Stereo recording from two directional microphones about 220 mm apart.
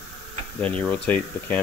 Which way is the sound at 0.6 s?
5° left (ahead or behind).